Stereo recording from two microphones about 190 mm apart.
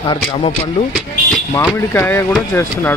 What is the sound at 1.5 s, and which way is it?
Speech, 15° left (ahead or behind).